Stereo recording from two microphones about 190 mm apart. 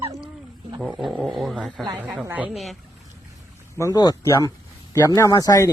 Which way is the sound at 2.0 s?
10° right (ahead or behind).